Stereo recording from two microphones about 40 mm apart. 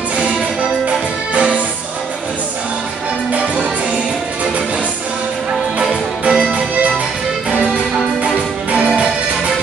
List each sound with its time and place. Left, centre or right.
0.2 s music: right
3.3 s music: right
5.8 s music: right